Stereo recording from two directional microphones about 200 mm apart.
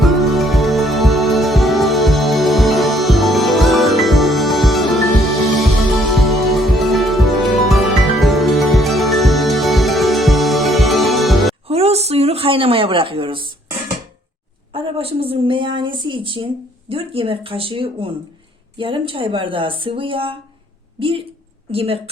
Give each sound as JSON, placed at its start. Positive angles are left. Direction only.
{"t": 0.0, "sound": "music", "side_deg": 0}
{"t": 6.1, "sound": "music", "side_deg": 0}
{"t": 11.7, "sound": "speech", "side_deg": -30}
{"t": 14.7, "sound": "a woman's voice", "side_deg": -25}